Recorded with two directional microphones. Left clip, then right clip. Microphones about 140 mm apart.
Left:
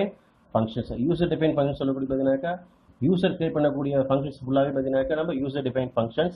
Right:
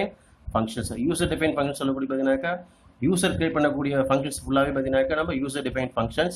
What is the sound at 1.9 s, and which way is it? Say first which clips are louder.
Speech: even; 15° right (ahead or behind).